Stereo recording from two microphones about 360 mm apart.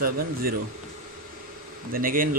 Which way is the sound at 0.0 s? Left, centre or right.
Right.